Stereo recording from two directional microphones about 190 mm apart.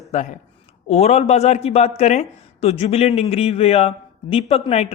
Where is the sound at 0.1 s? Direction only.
35° left (ahead or behind).